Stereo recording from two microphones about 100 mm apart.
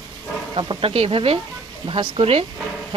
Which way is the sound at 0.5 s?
65° right (ahead or behind).